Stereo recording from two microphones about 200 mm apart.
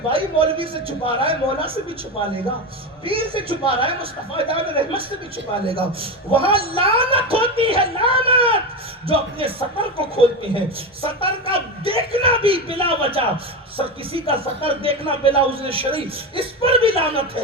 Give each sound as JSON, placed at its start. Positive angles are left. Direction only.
{"t": 0.1, "sound": "speech", "side_deg": -25}
{"t": 3.1, "sound": "speech", "side_deg": -25}